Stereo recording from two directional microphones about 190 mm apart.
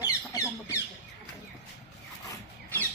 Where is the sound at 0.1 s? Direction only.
15° left (ahead or behind).